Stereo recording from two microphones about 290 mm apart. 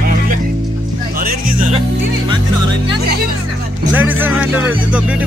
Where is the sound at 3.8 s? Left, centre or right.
Centre.